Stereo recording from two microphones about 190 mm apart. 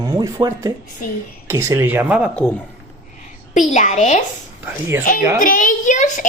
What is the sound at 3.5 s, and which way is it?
Speech, 40° left (ahead or behind).